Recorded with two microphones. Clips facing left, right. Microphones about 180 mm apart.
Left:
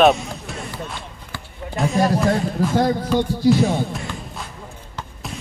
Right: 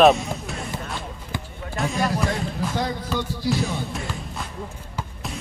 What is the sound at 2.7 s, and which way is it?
Speech, 55° left (ahead or behind).